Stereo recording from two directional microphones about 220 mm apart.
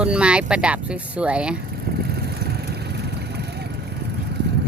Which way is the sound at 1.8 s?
45° right (ahead or behind).